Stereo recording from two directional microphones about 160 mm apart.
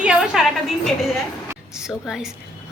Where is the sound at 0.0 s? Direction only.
5° right (ahead or behind).